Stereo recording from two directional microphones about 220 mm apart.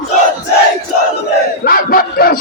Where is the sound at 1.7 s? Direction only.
40° left (ahead or behind).